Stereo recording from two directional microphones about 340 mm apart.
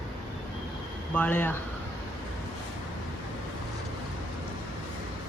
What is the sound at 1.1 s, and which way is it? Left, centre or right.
Speech, centre.